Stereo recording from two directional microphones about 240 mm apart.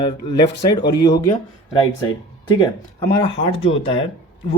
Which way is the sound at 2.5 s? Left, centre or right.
Centre.